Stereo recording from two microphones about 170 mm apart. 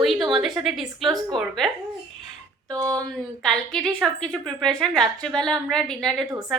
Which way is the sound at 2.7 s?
20° right (ahead or behind).